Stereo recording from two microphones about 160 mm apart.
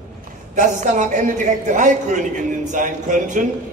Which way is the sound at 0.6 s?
50° right (ahead or behind).